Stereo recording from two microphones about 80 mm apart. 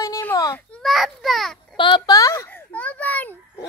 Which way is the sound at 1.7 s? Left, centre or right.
Left.